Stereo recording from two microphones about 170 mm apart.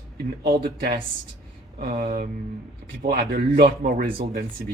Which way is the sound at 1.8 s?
55° right (ahead or behind).